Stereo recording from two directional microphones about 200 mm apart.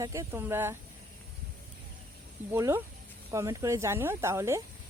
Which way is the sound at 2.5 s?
15° right (ahead or behind).